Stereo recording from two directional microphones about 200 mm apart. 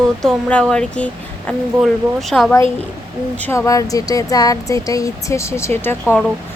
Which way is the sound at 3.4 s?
10° left (ahead or behind).